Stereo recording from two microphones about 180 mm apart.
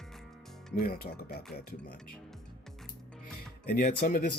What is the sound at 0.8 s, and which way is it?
Speech, 55° left (ahead or behind).